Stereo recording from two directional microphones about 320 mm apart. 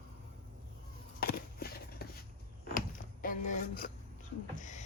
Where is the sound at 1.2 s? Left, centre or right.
Left.